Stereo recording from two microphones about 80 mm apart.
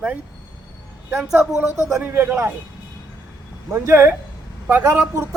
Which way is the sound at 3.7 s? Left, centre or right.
Right.